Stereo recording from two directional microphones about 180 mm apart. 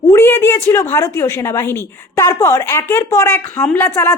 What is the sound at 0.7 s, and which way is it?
Speech, 15° left (ahead or behind).